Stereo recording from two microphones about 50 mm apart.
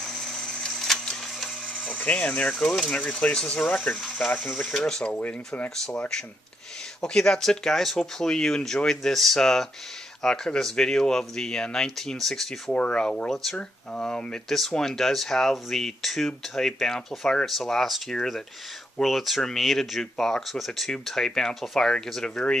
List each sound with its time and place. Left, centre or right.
0.0 s a sound: centre
1.7 s a sound: left
2.5 s speech: centre
3.0 s speech: left
3.6 s speech: left
4.4 s speech: centre
4.7 s speech: centre
12.7 s speech: left